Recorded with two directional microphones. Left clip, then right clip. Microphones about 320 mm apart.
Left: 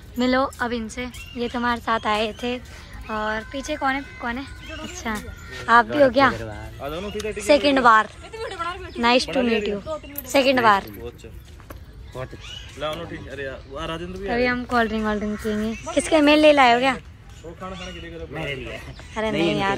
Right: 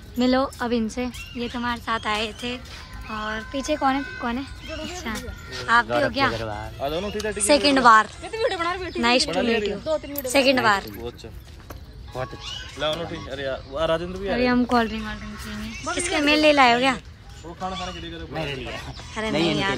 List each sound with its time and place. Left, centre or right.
0.2 s a woman's voice: centre
6.8 s speech: right
7.2 s speech: centre
8.2 s speech: right
9.0 s a woman's voice: centre
9.8 s speech: right
10.3 s a woman's voice: centre
12.7 s speech: right
14.3 s speech: centre
19.1 s a woman's voice: centre